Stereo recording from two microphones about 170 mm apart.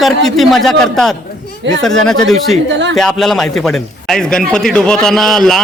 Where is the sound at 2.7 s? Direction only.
90° right.